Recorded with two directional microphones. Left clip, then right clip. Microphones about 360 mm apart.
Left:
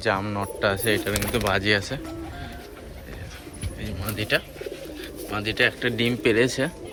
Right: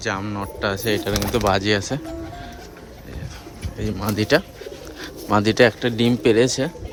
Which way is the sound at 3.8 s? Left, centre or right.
Centre.